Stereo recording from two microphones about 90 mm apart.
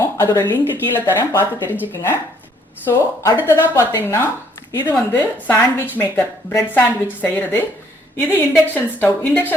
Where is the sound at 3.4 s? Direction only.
30° left (ahead or behind).